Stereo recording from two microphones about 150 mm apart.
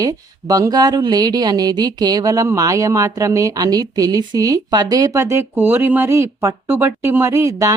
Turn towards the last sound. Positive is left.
turn(degrees=-20)  # may be behind; listen again after turning